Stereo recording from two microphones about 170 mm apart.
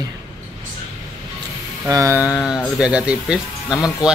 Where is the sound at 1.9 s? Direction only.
20° right (ahead or behind).